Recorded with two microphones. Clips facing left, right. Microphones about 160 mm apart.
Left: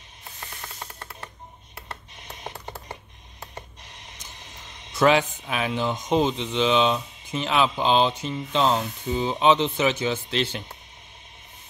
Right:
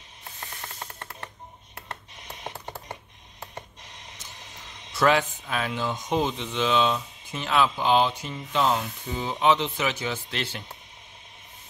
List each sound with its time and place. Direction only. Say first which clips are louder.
4.9 s speech: left 3 dB; 20° left (ahead or behind)